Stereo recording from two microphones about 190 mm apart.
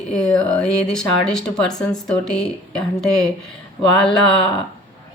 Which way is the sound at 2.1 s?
5° left (ahead or behind).